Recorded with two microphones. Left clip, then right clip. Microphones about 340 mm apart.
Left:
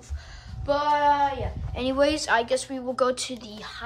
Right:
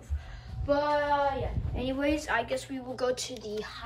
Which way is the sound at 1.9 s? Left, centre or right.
Centre.